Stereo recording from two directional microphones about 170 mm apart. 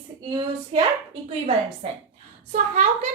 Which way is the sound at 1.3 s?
40° right (ahead or behind).